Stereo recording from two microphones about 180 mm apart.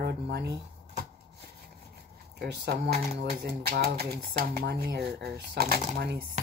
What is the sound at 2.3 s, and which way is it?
Speech, 65° right (ahead or behind).